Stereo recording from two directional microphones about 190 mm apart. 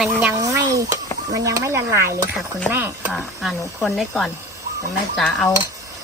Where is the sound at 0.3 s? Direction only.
20° right (ahead or behind).